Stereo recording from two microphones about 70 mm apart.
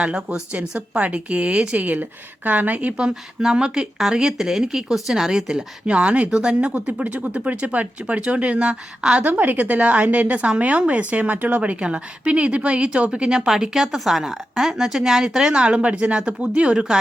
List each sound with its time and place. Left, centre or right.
0.0 s a woman's voice: centre
9.2 s a woman's voice: right